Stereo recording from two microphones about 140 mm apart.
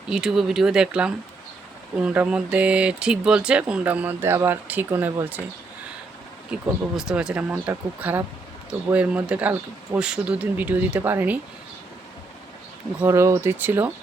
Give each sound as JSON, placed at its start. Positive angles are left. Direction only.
{"t": 0.1, "sound": "speech", "side_deg": -5}
{"t": 6.5, "sound": "speech", "side_deg": -5}
{"t": 13.0, "sound": "speech", "side_deg": -20}